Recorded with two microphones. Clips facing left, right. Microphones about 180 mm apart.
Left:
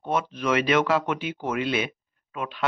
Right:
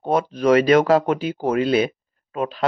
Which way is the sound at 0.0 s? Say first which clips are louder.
Right 7 dB; 40° right (ahead or behind).